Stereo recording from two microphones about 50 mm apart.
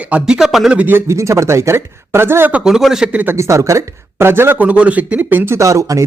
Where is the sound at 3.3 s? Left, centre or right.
Right.